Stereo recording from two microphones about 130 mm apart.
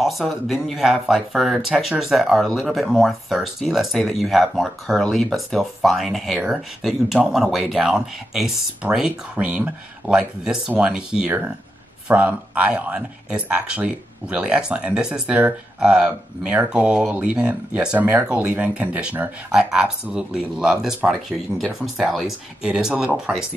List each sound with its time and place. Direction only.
0.0 s speech: centre (ahead or behind)
8.8 s speech: 15° right (ahead or behind)